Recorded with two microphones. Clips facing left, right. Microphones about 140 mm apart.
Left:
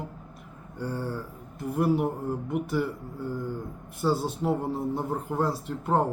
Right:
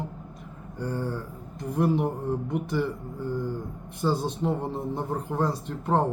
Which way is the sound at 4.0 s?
5° left (ahead or behind).